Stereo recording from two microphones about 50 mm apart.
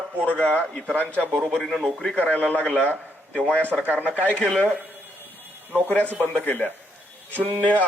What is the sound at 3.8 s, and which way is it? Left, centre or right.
Speech, right.